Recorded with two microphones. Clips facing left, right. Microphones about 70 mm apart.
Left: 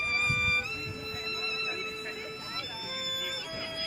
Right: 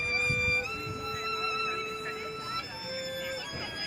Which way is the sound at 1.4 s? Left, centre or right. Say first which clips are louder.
Right 4 dB; right.